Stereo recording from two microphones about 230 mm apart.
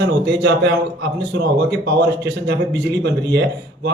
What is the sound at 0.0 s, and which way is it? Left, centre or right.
Speech, right.